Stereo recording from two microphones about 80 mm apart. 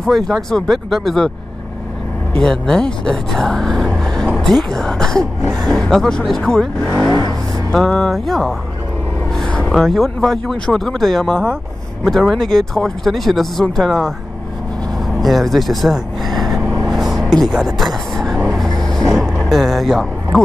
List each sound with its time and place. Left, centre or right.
0.0 s speech: centre
2.4 s speech: centre
3.9 s vehicle: centre
4.4 s speech: centre
6.8 s speech: left
7.7 s speech: centre
9.7 s speech: centre
15.1 s speech: centre
16.8 s vehicle: centre